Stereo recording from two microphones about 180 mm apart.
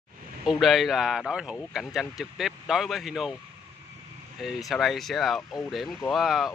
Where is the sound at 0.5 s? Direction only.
Centre (ahead or behind).